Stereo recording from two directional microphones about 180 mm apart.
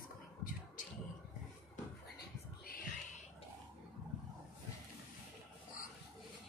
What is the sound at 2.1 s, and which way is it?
Whispering, 55° left (ahead or behind).